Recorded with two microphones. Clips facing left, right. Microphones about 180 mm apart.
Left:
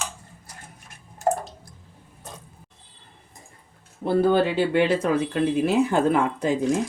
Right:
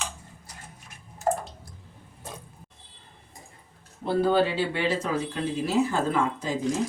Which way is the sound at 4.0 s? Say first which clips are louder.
Left 3 dB; 55° left (ahead or behind).